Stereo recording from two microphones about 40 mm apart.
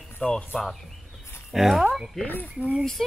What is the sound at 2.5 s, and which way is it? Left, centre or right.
Speech, right.